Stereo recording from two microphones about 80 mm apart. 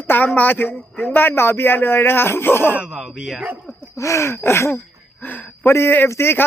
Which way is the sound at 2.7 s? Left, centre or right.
Centre.